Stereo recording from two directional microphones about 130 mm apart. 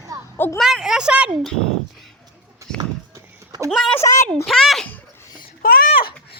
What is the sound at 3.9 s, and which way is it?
Speech, 25° left (ahead or behind).